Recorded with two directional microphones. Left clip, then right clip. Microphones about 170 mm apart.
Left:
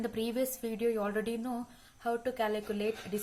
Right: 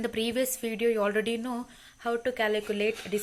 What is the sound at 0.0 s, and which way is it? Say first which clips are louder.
Speech: right 5 dB; 30° right (ahead or behind).